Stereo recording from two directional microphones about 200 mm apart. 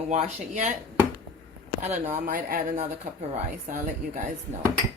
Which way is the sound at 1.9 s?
40° right (ahead or behind).